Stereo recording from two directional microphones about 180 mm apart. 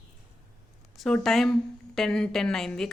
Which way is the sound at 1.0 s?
Centre (ahead or behind).